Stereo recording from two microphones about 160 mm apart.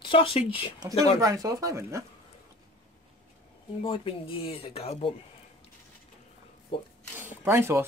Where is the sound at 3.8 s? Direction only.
35° left (ahead or behind).